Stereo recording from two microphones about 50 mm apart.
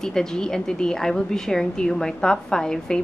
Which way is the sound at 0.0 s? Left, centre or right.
Centre.